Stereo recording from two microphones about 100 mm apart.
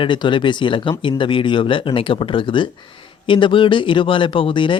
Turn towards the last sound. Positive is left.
turn(degrees=55)  # may be behind; listen again after turning